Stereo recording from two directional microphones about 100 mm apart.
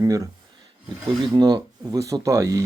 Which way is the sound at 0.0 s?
35° right (ahead or behind).